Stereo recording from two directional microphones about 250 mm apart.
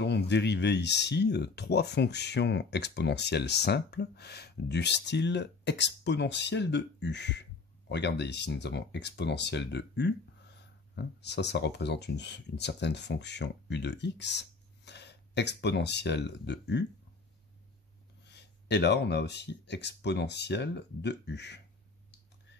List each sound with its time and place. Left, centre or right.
0.0 s speech: left
18.2 s speech: left